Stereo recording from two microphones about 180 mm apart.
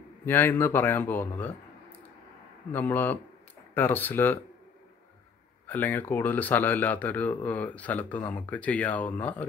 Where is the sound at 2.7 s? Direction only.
10° left (ahead or behind).